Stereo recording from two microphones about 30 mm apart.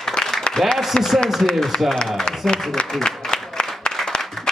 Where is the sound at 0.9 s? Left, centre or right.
Left.